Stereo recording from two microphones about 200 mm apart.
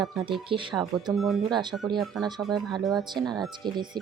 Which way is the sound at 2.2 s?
20° right (ahead or behind).